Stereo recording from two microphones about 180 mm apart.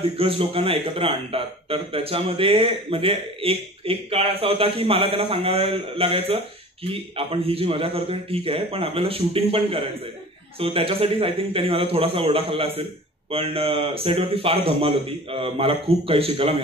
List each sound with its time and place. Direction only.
0.0 s a man's voice: 30° right (ahead or behind)